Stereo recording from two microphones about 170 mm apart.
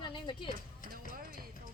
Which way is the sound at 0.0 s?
30° left (ahead or behind).